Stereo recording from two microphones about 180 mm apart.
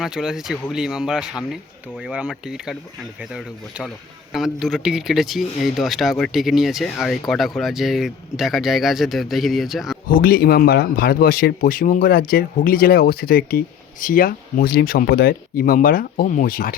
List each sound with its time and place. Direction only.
0.0 s speech: 5° right (ahead or behind)
10.1 s speech: 55° left (ahead or behind)